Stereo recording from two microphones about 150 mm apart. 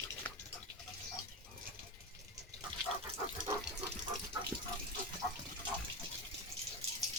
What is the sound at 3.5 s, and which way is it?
Water, 25° right (ahead or behind).